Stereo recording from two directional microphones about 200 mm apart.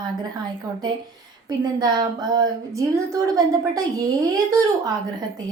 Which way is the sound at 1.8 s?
20° right (ahead or behind).